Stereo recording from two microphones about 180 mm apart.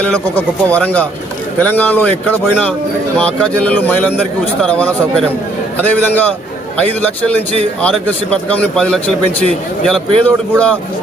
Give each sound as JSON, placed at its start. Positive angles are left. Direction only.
{"t": 0.0, "sound": "speech", "side_deg": 5}